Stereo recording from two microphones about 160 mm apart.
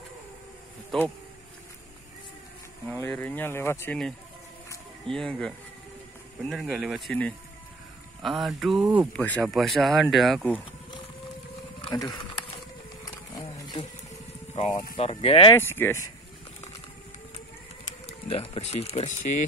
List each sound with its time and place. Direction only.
0.9 s speech: centre (ahead or behind)
3.1 s speech: 10° left (ahead or behind)
11.8 s speech: 25° left (ahead or behind)
13.0 s wild animals: 25° left (ahead or behind)
14.5 s speech: 45° left (ahead or behind)
15.5 s speech: 15° left (ahead or behind)
18.0 s speech: 40° left (ahead or behind)